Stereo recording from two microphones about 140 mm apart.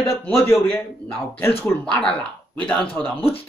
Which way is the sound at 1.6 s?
10° left (ahead or behind).